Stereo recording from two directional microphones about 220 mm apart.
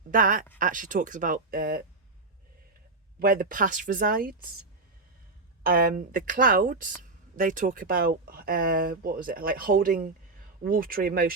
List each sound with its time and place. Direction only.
0.1 s speech: 35° right (ahead or behind)
3.2 s speech: 40° right (ahead or behind)
5.6 s speech: 40° right (ahead or behind)